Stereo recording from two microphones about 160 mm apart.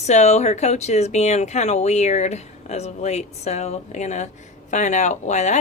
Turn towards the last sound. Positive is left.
turn(degrees=45)  # may be behind; listen again after turning